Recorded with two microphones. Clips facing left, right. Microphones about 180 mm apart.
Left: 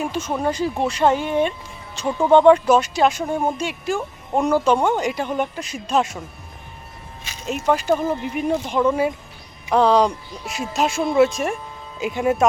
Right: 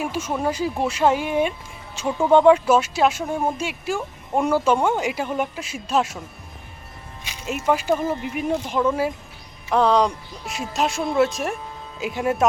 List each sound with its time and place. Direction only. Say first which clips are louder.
0.0 s speech: left 1 dB; 5° right (ahead or behind)
7.3 s speech: left 1 dB; 5° right (ahead or behind)